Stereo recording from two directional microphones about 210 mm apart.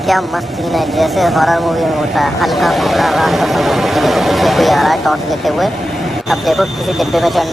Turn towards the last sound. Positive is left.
turn(degrees=0)  # may be behind; listen again after turning